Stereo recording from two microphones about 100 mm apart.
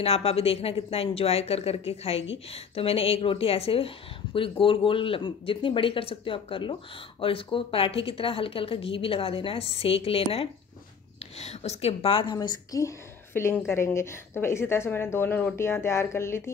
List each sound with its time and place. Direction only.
0.0 s speech: 75° left (ahead or behind)
11.3 s a woman's voice: 90° left; by 12.4 s 65° left (ahead or behind)
12.4 s a woman's voice: 40° left (ahead or behind)
13.3 s a woman's voice: 25° left (ahead or behind)